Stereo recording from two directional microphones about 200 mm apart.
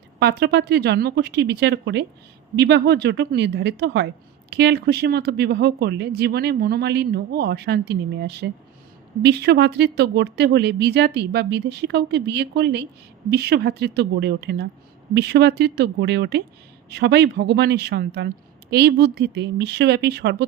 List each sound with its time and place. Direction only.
0.2 s a woman's voice: 55° right (ahead or behind)